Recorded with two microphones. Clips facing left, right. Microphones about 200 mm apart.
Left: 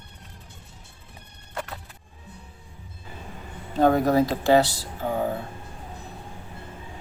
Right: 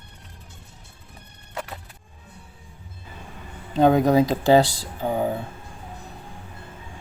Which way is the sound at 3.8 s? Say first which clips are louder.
Right 2 dB; 20° right (ahead or behind).